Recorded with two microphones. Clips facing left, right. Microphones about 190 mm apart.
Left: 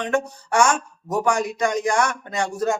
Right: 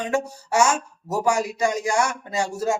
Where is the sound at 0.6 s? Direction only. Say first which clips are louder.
Left 1 dB; 25° right (ahead or behind).